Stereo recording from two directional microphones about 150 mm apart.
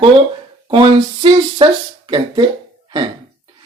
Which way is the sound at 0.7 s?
35° right (ahead or behind).